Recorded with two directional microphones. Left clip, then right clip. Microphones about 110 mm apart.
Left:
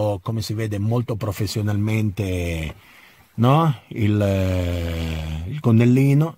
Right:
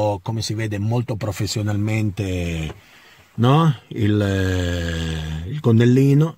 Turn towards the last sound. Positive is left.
turn(degrees=45)  # may be behind; listen again after turning